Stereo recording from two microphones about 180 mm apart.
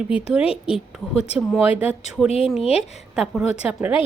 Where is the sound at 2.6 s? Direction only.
35° left (ahead or behind).